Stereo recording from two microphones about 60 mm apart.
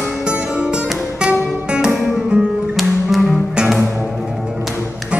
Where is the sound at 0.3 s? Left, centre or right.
Centre.